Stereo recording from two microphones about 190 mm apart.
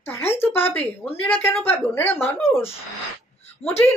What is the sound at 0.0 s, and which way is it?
Speech, 10° left (ahead or behind).